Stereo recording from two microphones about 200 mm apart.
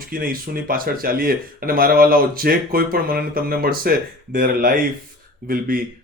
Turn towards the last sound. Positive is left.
turn(degrees=-45)  # may be behind; listen again after turning